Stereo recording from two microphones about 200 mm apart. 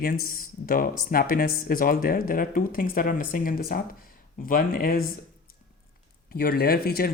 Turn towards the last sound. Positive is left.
turn(degrees=50)  # may be behind; listen again after turning